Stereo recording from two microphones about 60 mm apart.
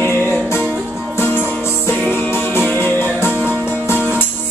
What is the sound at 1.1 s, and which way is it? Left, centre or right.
Music, left.